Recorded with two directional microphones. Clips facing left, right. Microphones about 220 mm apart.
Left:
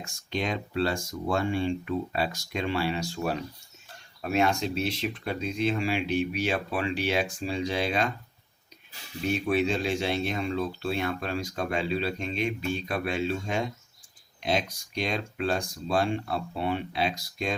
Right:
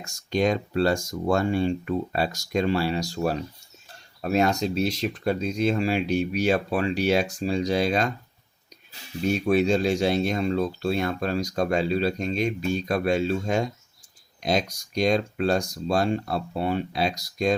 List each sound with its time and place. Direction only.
0.0 s speech: 40° right (ahead or behind)
9.2 s speech: 40° right (ahead or behind)